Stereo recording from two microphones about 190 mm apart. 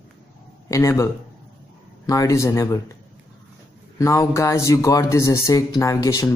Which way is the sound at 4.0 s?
15° left (ahead or behind).